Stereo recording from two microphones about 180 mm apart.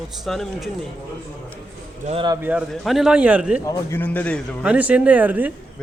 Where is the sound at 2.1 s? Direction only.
30° right (ahead or behind).